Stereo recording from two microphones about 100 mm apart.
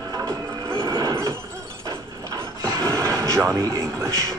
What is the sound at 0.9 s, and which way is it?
Neigh, 55° right (ahead or behind).